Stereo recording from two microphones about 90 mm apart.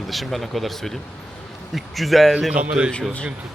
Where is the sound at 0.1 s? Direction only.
Centre (ahead or behind).